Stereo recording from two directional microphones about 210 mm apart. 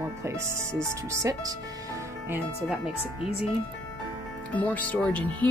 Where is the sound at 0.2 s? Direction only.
15° right (ahead or behind).